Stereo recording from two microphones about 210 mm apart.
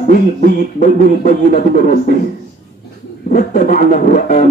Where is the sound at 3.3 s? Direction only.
45° left (ahead or behind).